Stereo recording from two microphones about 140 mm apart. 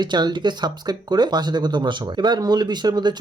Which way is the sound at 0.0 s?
30° right (ahead or behind).